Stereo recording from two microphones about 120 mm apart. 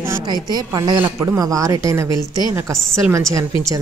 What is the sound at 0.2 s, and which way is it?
A woman's voice, 35° right (ahead or behind).